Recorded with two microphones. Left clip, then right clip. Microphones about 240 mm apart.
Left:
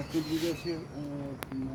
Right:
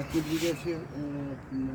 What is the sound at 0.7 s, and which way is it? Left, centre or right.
Speech, centre.